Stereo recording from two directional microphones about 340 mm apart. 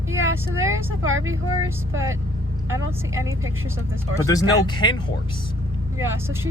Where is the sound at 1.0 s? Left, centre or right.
Right.